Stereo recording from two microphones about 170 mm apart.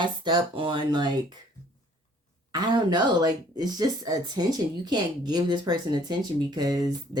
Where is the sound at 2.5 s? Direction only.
25° right (ahead or behind).